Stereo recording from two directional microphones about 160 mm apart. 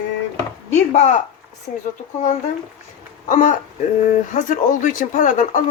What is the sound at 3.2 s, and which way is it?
A woman's voice, 55° left (ahead or behind).